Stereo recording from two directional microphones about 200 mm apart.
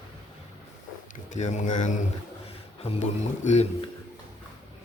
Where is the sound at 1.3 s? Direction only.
35° left (ahead or behind).